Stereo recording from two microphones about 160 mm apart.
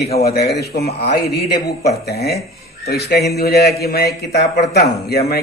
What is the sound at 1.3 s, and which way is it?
A man's voice, 75° left (ahead or behind).